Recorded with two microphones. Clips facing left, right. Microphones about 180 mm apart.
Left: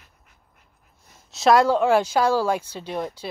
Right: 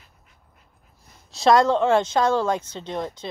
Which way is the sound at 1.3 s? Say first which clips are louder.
Even; 5° left (ahead or behind).